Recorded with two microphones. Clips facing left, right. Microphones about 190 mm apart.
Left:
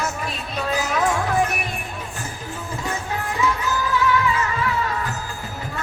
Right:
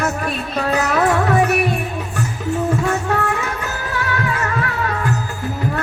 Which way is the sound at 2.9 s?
70° right (ahead or behind).